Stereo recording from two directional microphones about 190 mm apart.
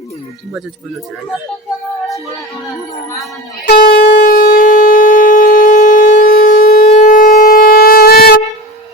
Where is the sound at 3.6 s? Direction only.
55° left (ahead or behind).